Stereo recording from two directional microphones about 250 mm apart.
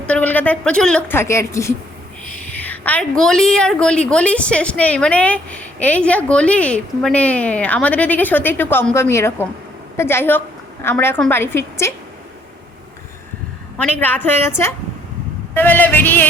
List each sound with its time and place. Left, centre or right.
0.1 s a woman's voice: centre
14.0 s speech: centre